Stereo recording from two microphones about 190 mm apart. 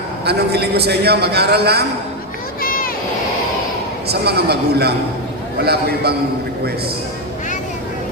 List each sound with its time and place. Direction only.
0.3 s a man's voice: 60° right (ahead or behind)
2.6 s vehicle: 50° left (ahead or behind)
4.1 s a man's voice: 55° right (ahead or behind)